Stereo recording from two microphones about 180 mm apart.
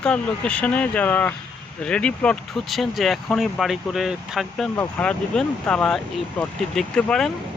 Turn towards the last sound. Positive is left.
turn(degrees=5)  # may be behind; listen again after turning